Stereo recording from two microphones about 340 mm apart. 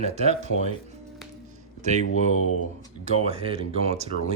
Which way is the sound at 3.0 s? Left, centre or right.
Centre.